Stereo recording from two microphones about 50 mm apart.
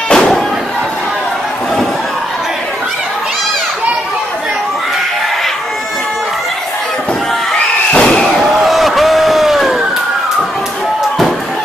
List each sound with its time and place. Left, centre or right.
0.1 s slam: centre
7.9 s slam: centre
8.2 s slam: centre
8.5 s a sound: centre